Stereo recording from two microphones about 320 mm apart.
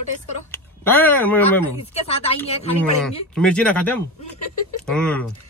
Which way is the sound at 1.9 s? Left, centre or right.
Centre.